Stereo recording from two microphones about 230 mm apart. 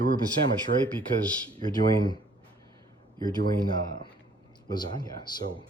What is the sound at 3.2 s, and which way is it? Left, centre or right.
Speech, centre.